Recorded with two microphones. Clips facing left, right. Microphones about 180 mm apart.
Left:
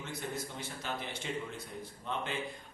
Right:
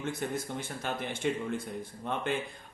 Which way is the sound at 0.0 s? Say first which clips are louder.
Right 6 dB; 50° right (ahead or behind).